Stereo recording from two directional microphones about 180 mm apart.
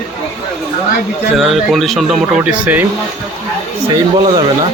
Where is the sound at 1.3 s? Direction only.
Centre (ahead or behind).